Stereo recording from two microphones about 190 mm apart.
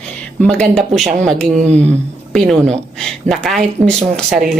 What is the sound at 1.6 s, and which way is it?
Speech, 35° right (ahead or behind).